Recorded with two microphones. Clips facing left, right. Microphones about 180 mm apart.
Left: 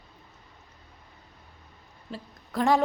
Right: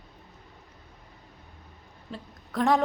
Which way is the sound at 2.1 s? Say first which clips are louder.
Left 1 dB; centre (ahead or behind).